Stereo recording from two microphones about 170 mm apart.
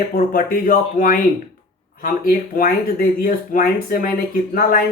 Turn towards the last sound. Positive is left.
turn(degrees=55)  # may be behind; listen again after turning